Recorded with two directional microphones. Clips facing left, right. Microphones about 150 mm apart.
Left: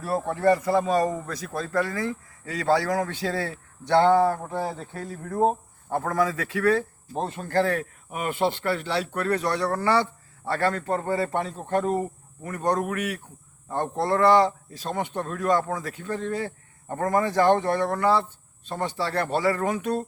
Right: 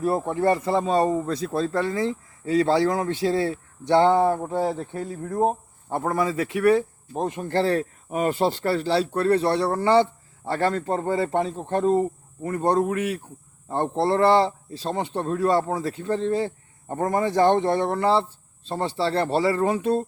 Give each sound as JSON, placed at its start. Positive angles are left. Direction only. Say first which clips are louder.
{"t": 0.0, "sound": "speech", "louder": "right 1 dB", "side_deg": -20}